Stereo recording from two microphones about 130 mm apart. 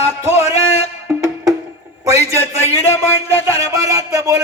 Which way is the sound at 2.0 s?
20° right (ahead or behind).